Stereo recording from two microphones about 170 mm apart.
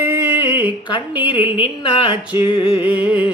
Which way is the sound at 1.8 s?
30° left (ahead or behind).